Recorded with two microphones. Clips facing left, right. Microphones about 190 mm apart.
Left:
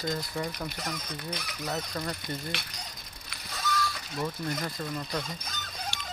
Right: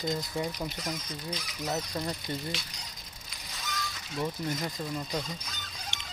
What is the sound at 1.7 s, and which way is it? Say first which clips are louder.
Speech: right 1 dB; 20° right (ahead or behind).